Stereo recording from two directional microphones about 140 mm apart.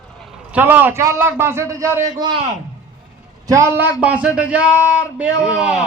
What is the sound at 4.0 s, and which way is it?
A man's voice, 10° right (ahead or behind).